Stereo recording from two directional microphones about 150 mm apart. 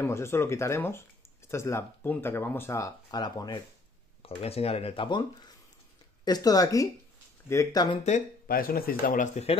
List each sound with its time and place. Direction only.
0.0 s speech: 15° left (ahead or behind)
4.2 s speech: 40° left (ahead or behind)
6.2 s speech: 25° left (ahead or behind)
8.5 s speech: 75° left (ahead or behind); by 9.6 s 50° left (ahead or behind)